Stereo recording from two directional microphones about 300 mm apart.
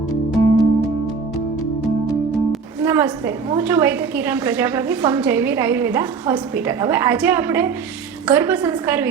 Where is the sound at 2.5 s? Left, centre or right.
Centre.